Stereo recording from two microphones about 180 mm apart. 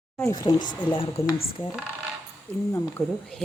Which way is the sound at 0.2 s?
20° left (ahead or behind).